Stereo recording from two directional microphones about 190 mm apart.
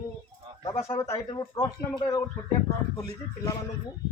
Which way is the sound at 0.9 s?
20° left (ahead or behind).